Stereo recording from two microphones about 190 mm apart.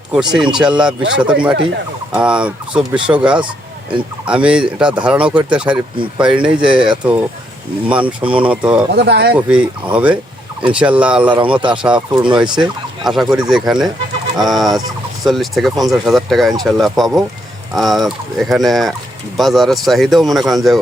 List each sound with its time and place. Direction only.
0.1 s speech: 5° right (ahead or behind)
9.0 s speech: 60° right (ahead or behind)
9.3 s speech: 5° right (ahead or behind)